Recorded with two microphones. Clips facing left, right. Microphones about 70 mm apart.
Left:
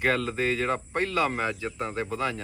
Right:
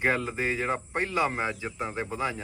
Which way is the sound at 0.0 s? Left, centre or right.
Centre.